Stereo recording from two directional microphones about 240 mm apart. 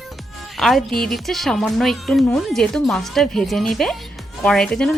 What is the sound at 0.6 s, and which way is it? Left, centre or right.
A woman's voice, centre.